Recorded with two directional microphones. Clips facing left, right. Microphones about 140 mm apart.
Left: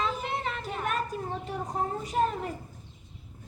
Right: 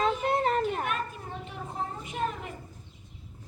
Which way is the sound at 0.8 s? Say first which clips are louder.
Left 2 dB; 40° left (ahead or behind).